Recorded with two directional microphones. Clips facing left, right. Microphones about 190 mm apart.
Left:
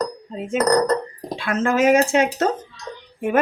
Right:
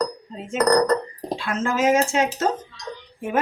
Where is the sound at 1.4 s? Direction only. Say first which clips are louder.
Left 4 dB; 60° left (ahead or behind).